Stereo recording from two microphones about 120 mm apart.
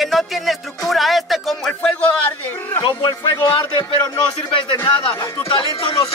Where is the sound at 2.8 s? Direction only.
35° left (ahead or behind).